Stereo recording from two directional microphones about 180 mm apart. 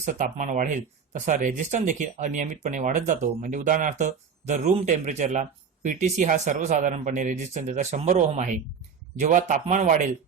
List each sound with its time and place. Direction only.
0.0 s speech: 45° right (ahead or behind)